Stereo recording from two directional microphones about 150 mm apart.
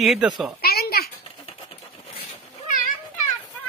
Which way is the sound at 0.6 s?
90° left.